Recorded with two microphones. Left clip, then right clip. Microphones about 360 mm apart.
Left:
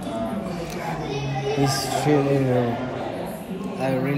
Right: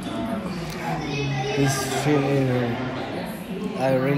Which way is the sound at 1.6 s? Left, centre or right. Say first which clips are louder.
Left 2 dB; centre.